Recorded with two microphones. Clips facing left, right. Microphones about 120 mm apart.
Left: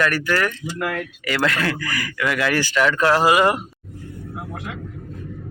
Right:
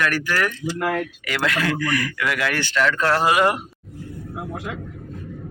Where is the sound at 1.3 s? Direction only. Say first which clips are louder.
Left 2 dB; centre (ahead or behind).